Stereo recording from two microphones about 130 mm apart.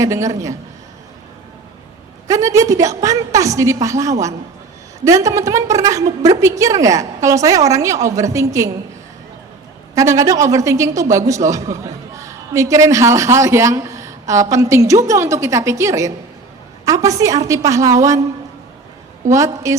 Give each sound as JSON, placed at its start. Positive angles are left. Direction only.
{"t": 0.0, "sound": "speech", "side_deg": -25}
{"t": 2.2, "sound": "speech", "side_deg": -25}
{"t": 9.9, "sound": "speech", "side_deg": -25}
{"t": 19.3, "sound": "speech", "side_deg": -25}